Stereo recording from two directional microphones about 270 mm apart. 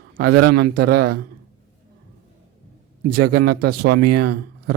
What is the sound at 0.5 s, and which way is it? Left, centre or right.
Speech, right.